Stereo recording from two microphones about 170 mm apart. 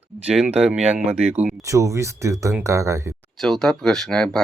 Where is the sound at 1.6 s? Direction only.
20° right (ahead or behind).